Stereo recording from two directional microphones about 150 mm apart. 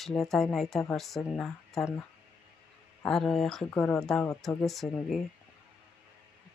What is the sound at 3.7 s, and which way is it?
Speech, 15° left (ahead or behind).